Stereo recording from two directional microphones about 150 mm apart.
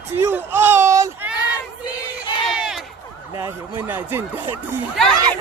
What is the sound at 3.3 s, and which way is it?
Speech, 20° right (ahead or behind).